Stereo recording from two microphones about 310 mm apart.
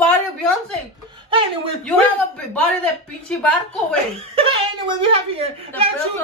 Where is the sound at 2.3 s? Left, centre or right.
Centre.